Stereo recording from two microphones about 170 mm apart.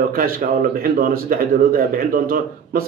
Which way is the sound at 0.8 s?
60° right (ahead or behind).